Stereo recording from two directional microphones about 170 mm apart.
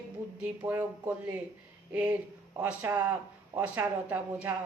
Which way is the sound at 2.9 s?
20° right (ahead or behind).